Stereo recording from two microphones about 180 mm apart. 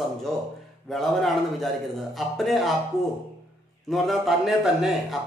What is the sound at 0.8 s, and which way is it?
Speech, centre (ahead or behind).